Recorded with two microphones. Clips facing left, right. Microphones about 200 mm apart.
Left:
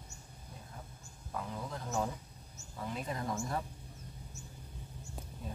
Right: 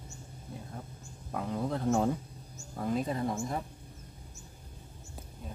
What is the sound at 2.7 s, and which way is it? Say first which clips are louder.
Speech: right 8 dB; 45° right (ahead or behind).